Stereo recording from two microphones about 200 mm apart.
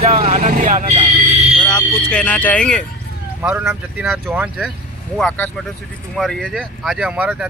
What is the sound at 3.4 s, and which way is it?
Speech, 5° right (ahead or behind).